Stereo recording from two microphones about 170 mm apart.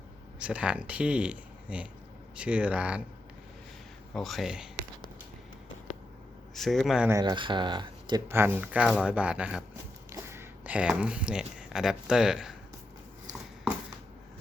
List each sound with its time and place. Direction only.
0.3 s speech: 5° right (ahead or behind)
4.1 s speech: centre (ahead or behind)
6.5 s speech: centre (ahead or behind)
7.1 s speech: 25° right (ahead or behind)
8.3 s speech: 15° right (ahead or behind)
10.1 s speech: 15° right (ahead or behind)